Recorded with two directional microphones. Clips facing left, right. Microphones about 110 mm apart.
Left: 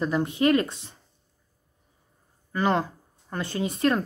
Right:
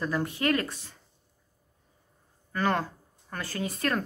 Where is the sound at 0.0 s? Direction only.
20° left (ahead or behind).